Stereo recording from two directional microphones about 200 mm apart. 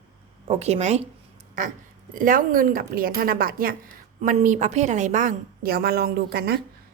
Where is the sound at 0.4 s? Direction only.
30° right (ahead or behind); by 3.8 s 45° right (ahead or behind).